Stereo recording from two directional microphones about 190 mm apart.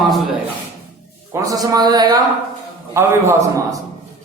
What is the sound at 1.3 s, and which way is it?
Speech, 15° right (ahead or behind).